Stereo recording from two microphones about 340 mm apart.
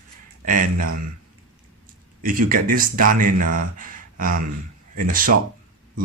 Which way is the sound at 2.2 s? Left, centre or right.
Right.